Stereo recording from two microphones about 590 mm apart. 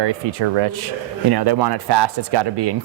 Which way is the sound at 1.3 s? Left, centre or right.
Right.